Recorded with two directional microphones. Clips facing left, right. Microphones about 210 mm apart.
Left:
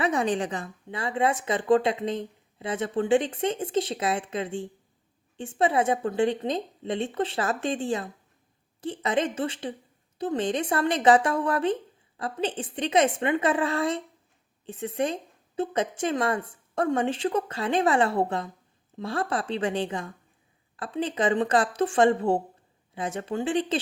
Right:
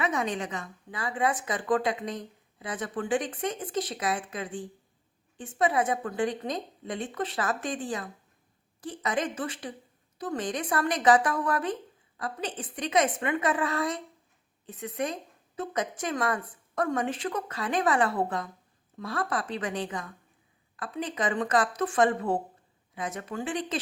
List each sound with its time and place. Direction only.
0.0 s a woman's voice: 30° left (ahead or behind)